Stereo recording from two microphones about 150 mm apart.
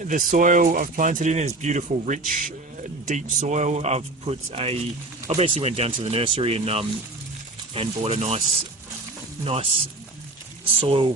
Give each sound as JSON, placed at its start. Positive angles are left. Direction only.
{"t": 0.0, "sound": "speech", "side_deg": -60}
{"t": 3.1, "sound": "speech", "side_deg": -55}
{"t": 10.8, "sound": "speech", "side_deg": -35}